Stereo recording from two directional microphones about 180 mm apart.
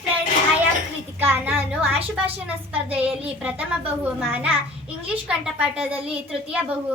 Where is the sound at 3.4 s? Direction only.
5° right (ahead or behind).